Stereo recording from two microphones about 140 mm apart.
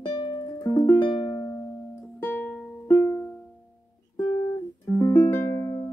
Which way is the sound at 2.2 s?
15° left (ahead or behind).